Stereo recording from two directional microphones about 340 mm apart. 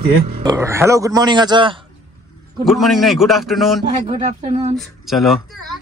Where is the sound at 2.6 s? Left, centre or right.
Centre.